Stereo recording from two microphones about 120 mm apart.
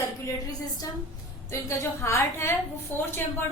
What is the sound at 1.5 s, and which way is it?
A woman's voice, 25° left (ahead or behind).